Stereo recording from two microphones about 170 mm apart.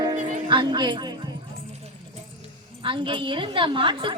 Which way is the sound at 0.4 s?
30° right (ahead or behind).